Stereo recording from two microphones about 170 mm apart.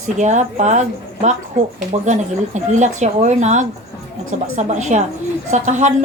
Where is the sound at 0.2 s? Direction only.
45° right (ahead or behind).